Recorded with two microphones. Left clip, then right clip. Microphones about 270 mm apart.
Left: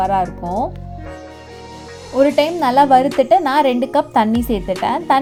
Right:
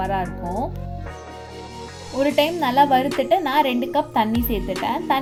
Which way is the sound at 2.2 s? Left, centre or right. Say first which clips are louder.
Left 5 dB; left.